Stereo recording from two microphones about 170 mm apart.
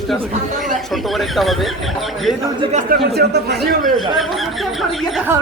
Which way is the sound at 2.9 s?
70° right (ahead or behind).